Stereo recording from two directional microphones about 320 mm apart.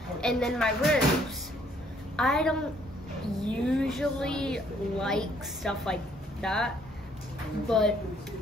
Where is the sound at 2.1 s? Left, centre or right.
Centre.